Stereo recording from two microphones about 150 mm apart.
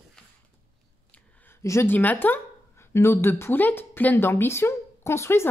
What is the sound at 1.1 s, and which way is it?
Speech, 10° left (ahead or behind).